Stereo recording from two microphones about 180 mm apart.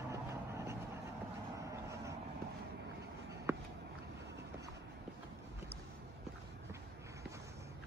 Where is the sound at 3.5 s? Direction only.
15° right (ahead or behind).